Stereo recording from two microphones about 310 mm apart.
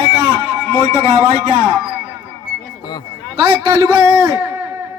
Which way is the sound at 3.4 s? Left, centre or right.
Centre.